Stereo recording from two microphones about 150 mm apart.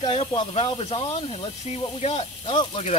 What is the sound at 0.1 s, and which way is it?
Speech, 35° left (ahead or behind).